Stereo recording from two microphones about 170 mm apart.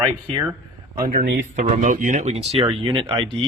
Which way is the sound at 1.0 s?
55° right (ahead or behind).